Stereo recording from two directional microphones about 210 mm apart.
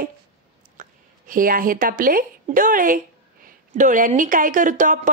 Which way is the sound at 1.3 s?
40° right (ahead or behind).